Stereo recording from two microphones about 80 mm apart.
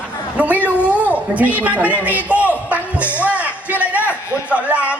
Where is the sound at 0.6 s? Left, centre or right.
Centre.